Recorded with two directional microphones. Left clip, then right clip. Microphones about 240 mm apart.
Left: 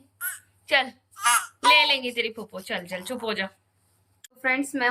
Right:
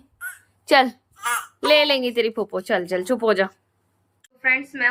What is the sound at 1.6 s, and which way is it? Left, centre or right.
Speech, centre.